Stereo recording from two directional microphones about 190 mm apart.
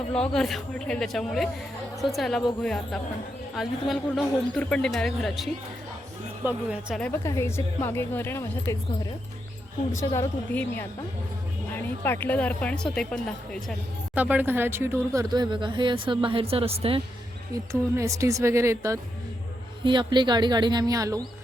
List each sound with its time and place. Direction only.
0.1 s a man's voice: 5° left (ahead or behind)
7.0 s a woman's voice: 15° left (ahead or behind)
9.9 s a woman's voice: 15° left (ahead or behind)
14.2 s speech: 10° right (ahead or behind); by 17.0 s 30° right (ahead or behind)
17.5 s speech: 15° right (ahead or behind)